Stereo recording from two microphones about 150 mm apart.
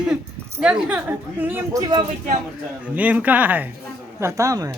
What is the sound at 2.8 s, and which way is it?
A woman's voice, 10° right (ahead or behind).